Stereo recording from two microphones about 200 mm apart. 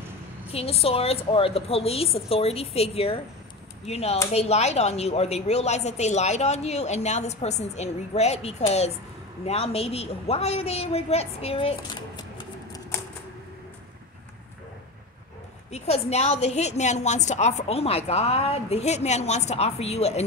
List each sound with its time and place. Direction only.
0.5 s a woman's voice: 30° left (ahead or behind)
15.7 s a woman's voice: 30° left (ahead or behind)